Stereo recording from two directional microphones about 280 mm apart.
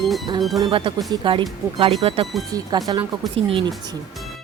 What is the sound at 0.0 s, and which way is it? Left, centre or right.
Music, centre.